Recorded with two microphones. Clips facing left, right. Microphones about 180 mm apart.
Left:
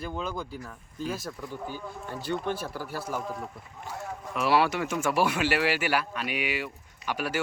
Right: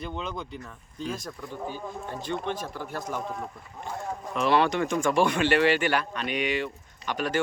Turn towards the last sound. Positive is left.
turn(degrees=10)  # may be behind; listen again after turning